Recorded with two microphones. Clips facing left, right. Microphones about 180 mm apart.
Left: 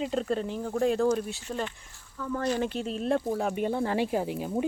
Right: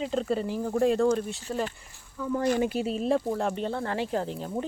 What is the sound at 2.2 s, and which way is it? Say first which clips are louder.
Speech: right 3 dB; 10° right (ahead or behind).